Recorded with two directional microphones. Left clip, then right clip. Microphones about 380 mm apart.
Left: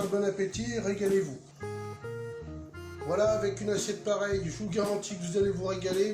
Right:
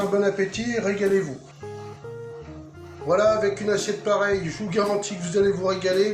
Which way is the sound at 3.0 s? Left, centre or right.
Right.